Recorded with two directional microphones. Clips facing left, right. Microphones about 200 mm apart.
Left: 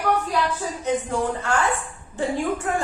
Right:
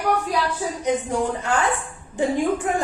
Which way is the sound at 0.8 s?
15° right (ahead or behind).